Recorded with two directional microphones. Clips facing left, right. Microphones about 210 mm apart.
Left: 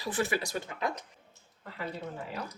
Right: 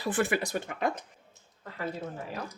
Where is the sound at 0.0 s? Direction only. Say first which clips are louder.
Right 3 dB; 55° right (ahead or behind).